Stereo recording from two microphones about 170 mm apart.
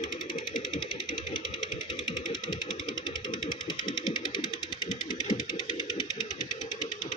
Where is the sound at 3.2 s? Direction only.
25° left (ahead or behind).